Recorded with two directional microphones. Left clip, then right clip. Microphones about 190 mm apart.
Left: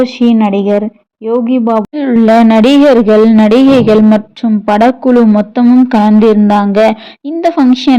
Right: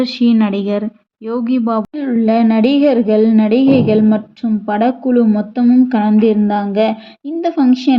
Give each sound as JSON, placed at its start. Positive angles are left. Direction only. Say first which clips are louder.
{"t": 0.0, "sound": "speech", "louder": "left 5 dB", "side_deg": 10}
{"t": 2.0, "sound": "a man's voice", "louder": "left 8 dB", "side_deg": 45}